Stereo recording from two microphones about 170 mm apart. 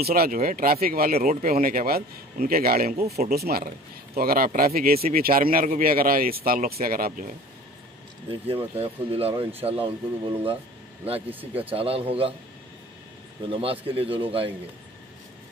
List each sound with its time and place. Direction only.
0.0 s speech: 60° right (ahead or behind)
8.7 s speech: 35° right (ahead or behind)
11.2 s speech: 10° right (ahead or behind)
11.7 s speech: 35° right (ahead or behind)
13.5 s speech: 35° right (ahead or behind)